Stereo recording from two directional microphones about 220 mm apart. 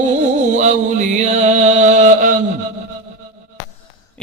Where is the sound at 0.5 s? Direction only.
30° right (ahead or behind).